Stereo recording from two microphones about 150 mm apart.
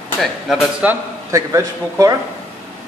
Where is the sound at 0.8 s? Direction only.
20° right (ahead or behind).